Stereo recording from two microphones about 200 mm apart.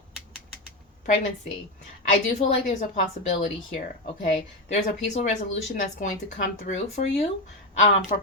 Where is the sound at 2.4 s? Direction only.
40° left (ahead or behind).